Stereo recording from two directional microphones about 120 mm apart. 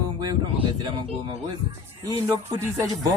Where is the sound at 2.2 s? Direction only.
20° right (ahead or behind).